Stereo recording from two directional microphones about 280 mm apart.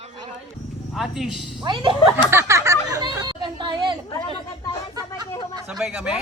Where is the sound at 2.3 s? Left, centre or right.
Centre.